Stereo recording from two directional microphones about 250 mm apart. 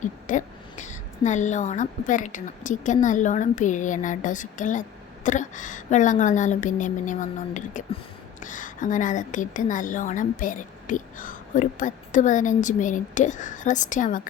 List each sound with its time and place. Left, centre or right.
0.0 s a woman's voice: left